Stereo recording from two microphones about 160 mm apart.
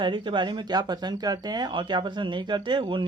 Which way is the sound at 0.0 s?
30° right (ahead or behind).